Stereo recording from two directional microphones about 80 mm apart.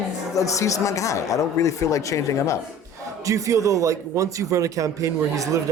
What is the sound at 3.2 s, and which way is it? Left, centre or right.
A man's voice, right.